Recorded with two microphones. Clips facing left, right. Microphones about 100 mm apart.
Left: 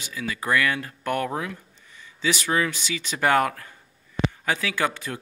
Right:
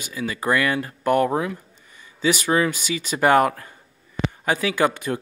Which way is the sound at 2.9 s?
10° right (ahead or behind).